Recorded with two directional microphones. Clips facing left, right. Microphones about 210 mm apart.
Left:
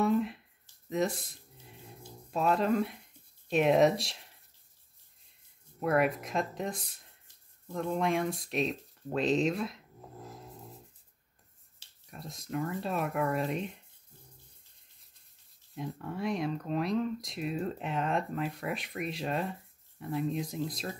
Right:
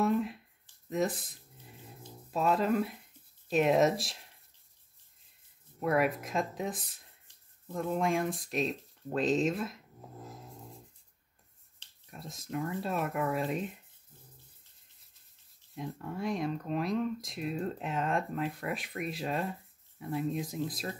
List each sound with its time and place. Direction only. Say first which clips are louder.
0.0 s a sound: left 1 dB; centre (ahead or behind)
3.4 s speech: left 1 dB; centre (ahead or behind)
5.8 s speech: left 1 dB; centre (ahead or behind)
11.8 s speech: left 1 dB; centre (ahead or behind)
15.7 s speech: left 1 dB; centre (ahead or behind)